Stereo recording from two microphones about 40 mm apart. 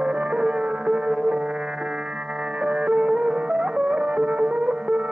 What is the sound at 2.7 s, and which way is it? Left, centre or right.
Music, right.